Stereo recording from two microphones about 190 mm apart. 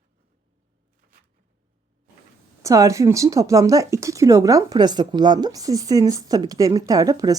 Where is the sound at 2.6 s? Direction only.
15° right (ahead or behind).